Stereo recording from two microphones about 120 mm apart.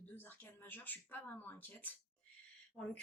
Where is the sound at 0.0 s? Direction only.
15° left (ahead or behind).